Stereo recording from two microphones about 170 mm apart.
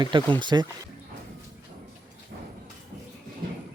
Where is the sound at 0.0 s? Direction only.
25° right (ahead or behind).